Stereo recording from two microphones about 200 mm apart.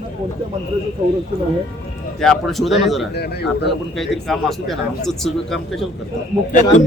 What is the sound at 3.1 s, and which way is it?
Speech, 55° left (ahead or behind).